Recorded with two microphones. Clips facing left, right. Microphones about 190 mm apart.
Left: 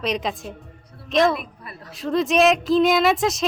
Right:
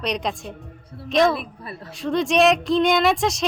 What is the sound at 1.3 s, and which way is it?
Speech, 30° right (ahead or behind).